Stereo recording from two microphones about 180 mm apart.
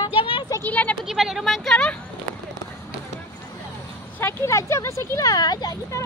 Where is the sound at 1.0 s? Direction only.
Centre (ahead or behind).